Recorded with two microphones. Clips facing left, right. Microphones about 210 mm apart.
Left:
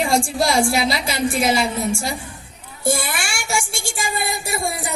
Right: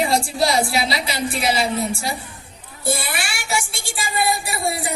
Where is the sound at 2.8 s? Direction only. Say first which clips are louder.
Left 2 dB; 45° left (ahead or behind).